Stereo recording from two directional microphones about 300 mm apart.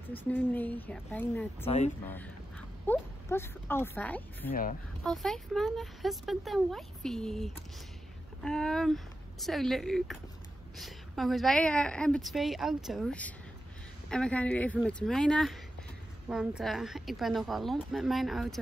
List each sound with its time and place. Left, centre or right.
0.1 s speech: centre
2.9 s speech: centre
4.5 s speech: left
5.0 s speech: centre